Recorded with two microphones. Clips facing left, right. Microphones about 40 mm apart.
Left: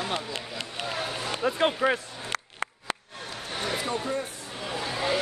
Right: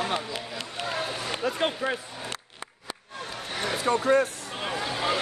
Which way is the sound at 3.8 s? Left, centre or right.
Right.